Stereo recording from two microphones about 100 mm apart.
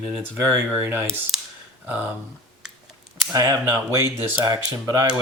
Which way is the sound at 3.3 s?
30° right (ahead or behind).